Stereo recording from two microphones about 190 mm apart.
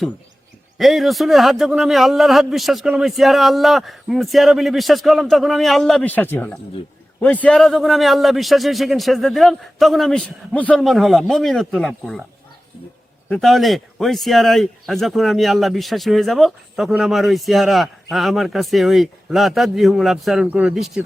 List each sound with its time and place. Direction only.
0.8 s a man's voice: centre (ahead or behind)
13.2 s a man's voice: centre (ahead or behind)